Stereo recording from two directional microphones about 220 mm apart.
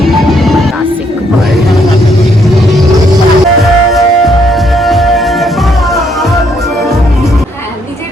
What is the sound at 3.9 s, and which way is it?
Music, centre (ahead or behind).